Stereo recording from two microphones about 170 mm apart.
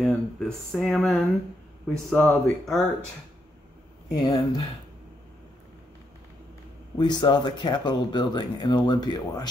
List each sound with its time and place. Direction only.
0.0 s speech: 5° left (ahead or behind)
4.1 s speech: 25° left (ahead or behind)
7.0 s speech: 25° left (ahead or behind)